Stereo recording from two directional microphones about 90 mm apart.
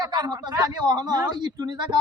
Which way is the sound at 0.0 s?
50° right (ahead or behind).